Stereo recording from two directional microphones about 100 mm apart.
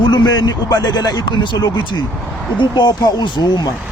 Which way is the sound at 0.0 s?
50° left (ahead or behind).